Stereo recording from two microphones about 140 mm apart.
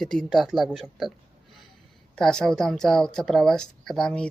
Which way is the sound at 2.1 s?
5° left (ahead or behind).